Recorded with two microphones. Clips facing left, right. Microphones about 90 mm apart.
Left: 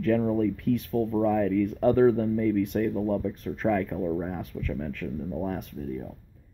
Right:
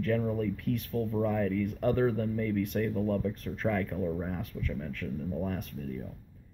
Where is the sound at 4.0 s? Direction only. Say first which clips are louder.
Left 4 dB; 20° left (ahead or behind).